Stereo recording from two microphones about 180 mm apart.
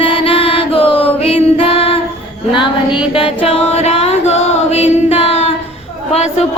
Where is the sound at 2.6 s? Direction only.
30° left (ahead or behind).